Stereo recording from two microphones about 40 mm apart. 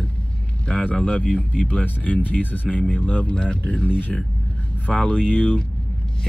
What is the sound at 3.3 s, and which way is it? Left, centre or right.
Speech, left.